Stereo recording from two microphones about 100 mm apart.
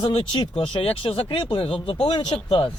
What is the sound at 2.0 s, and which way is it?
Speech, 55° left (ahead or behind).